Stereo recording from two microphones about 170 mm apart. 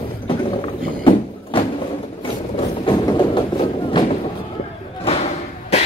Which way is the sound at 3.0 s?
30° left (ahead or behind).